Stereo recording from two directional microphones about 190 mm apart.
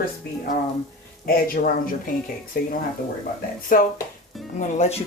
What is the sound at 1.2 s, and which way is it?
Speech, 50° left (ahead or behind).